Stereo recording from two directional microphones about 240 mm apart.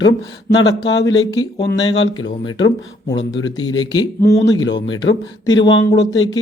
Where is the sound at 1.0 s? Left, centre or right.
Centre.